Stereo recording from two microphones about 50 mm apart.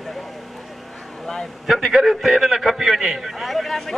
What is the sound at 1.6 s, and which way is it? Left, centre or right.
Speech, centre.